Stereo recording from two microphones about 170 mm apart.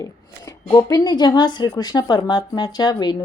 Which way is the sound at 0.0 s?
20° left (ahead or behind).